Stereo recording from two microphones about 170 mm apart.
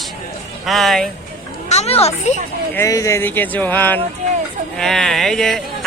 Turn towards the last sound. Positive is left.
turn(degrees=0)  # may be behind; listen again after turning